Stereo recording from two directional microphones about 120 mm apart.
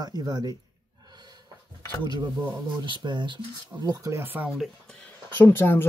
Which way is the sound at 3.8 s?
25° right (ahead or behind).